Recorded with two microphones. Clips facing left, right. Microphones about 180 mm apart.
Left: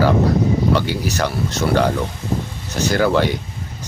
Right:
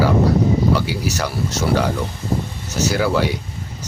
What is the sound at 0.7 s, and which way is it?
Speech, 5° right (ahead or behind).